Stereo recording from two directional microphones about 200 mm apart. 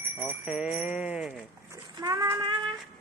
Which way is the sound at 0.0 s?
10° right (ahead or behind).